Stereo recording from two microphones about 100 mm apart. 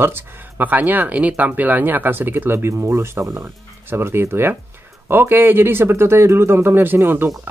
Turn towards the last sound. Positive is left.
turn(degrees=-20)  # may be behind; listen again after turning